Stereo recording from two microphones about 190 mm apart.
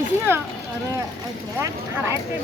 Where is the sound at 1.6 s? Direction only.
15° right (ahead or behind).